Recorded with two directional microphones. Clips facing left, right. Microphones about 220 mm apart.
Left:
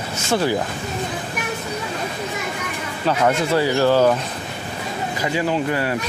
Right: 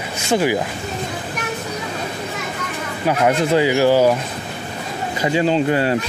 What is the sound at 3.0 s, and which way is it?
Speech, 15° right (ahead or behind).